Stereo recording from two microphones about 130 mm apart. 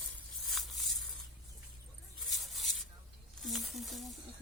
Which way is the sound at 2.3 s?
Centre (ahead or behind).